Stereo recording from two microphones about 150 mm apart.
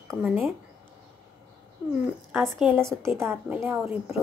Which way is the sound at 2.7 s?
20° right (ahead or behind).